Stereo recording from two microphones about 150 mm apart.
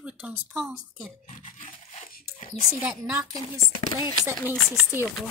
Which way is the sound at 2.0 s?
80° left.